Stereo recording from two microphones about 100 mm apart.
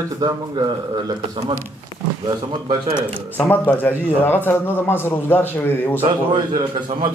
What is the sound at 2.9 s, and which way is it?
A man's voice, 20° left (ahead or behind).